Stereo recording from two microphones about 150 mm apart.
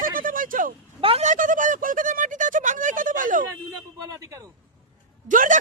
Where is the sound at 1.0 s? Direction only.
40° right (ahead or behind).